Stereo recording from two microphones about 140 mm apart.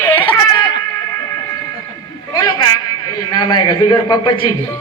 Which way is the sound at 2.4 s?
30° left (ahead or behind).